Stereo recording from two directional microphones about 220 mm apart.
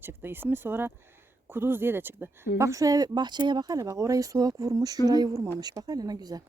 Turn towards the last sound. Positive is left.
turn(degrees=-15)  # may be behind; listen again after turning